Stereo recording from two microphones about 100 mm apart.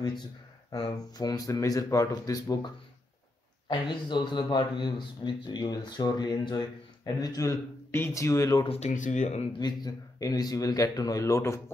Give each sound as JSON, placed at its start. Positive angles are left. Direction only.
{"t": 0.7, "sound": "speech", "side_deg": 45}
{"t": 3.6, "sound": "a man's voice", "side_deg": 50}
{"t": 7.9, "sound": "speech", "side_deg": 25}
{"t": 8.6, "sound": "speech", "side_deg": 90}
{"t": 9.6, "sound": "speech", "side_deg": 45}